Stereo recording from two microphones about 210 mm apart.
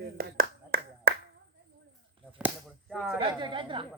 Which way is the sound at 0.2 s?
45° right (ahead or behind).